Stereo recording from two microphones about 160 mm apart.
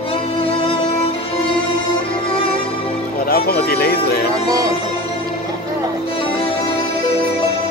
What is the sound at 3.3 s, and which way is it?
Music, 75° left (ahead or behind).